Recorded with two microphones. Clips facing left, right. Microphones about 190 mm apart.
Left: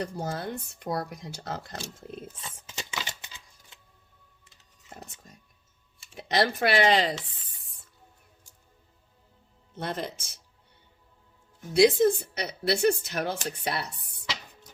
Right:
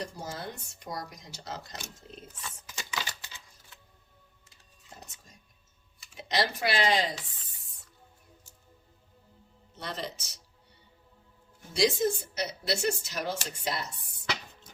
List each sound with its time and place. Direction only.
0.0 s speech: 60° left (ahead or behind)
2.2 s a sound: 25° left (ahead or behind)
4.9 s music: 55° left (ahead or behind)
6.2 s speech: 55° left (ahead or behind)
9.7 s speech: 55° left (ahead or behind)
11.7 s speech: 55° left (ahead or behind)